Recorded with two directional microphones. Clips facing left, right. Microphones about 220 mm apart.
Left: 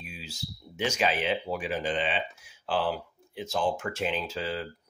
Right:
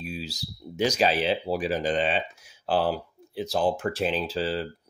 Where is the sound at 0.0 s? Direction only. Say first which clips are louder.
Right 7 dB; 35° right (ahead or behind).